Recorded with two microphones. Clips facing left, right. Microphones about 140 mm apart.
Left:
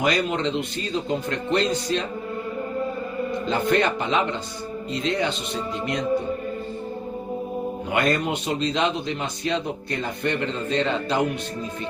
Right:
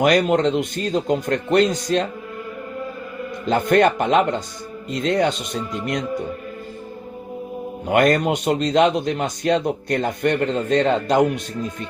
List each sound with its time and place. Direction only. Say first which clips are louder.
0.0 s a man's voice: right 6 dB; 55° right (ahead or behind)
3.5 s a man's voice: right 6 dB; 55° right (ahead or behind)
7.9 s a man's voice: right 7 dB; 50° right (ahead or behind)